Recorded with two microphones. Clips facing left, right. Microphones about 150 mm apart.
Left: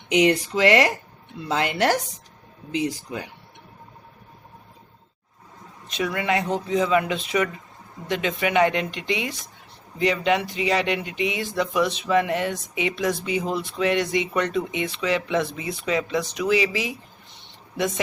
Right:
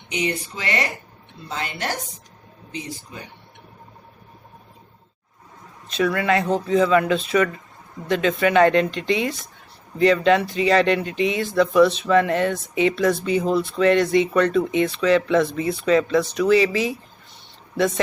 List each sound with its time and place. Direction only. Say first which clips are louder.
0.1 s speech: left 7 dB; 90° left
5.9 s speech: right 4 dB; 15° left (ahead or behind)